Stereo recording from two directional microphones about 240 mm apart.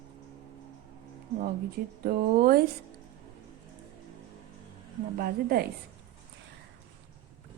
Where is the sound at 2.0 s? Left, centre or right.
Right.